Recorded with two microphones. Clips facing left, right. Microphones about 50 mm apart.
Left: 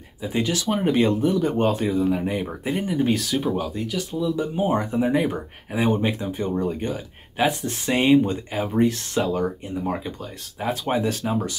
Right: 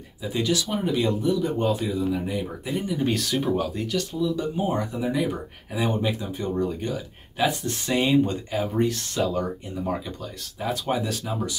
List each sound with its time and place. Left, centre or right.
0.2 s speech: left
3.0 s speech: centre
4.2 s speech: left
6.9 s speech: left
8.2 s speech: centre
10.6 s speech: left